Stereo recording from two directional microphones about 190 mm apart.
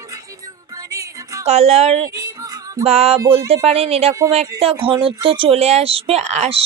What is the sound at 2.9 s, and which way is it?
Speech, 35° right (ahead or behind).